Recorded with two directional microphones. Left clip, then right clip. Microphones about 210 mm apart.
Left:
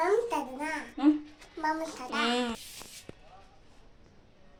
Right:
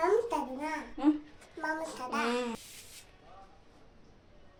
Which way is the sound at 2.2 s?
5° left (ahead or behind).